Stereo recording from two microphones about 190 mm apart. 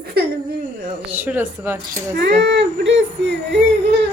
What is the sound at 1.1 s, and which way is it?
Speech, 10° right (ahead or behind).